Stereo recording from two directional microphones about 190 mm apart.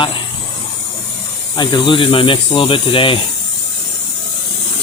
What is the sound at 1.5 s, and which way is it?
Speech, 25° left (ahead or behind).